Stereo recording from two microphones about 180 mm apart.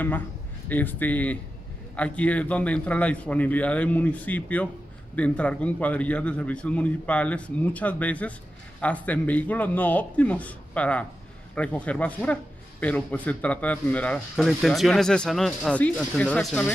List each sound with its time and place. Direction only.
0.7 s a man's voice: 10° left (ahead or behind)